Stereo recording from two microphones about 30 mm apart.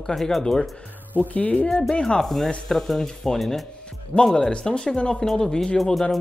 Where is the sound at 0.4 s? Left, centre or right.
Left.